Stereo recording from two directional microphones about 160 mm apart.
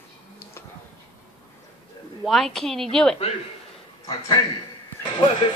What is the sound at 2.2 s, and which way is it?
Speech, centre (ahead or behind).